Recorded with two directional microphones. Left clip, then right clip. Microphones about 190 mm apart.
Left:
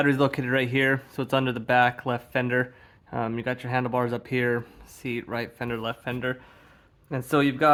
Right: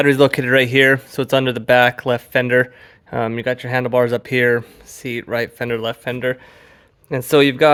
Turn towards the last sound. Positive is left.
turn(degrees=-45)  # may be behind; listen again after turning